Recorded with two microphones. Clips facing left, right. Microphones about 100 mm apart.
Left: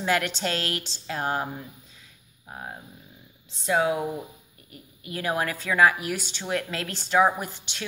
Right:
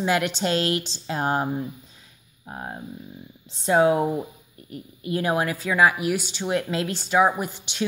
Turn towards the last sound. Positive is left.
turn(degrees=-10)  # may be behind; listen again after turning